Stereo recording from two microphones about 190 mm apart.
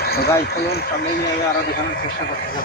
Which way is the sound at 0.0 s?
55° left (ahead or behind).